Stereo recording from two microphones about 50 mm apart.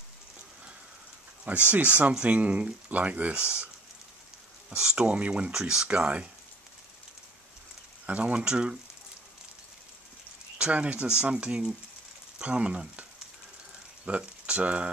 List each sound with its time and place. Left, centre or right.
1.7 s speech: right
4.6 s speech: centre
5.9 s speech: right
8.1 s speech: right
10.6 s speech: right
14.0 s speech: right